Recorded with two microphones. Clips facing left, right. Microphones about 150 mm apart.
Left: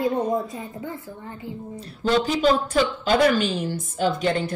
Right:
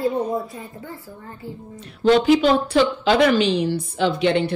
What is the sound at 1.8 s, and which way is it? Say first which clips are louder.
A woman's voice: right 5 dB; 40° left (ahead or behind).